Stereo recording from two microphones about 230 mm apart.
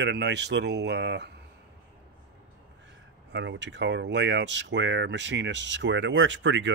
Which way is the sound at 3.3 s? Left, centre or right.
Right.